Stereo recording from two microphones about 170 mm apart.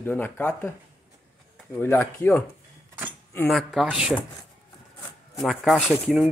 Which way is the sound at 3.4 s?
Centre (ahead or behind).